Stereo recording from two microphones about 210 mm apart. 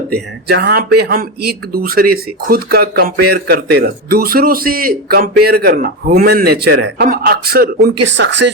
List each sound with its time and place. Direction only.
0.1 s speech: 50° right (ahead or behind)